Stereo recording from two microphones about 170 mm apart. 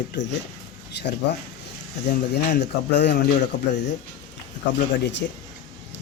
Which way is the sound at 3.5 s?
50° left (ahead or behind).